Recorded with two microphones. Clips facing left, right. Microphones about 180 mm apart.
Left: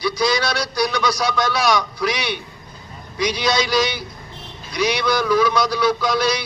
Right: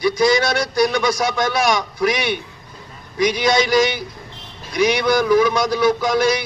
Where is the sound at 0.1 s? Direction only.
50° right (ahead or behind).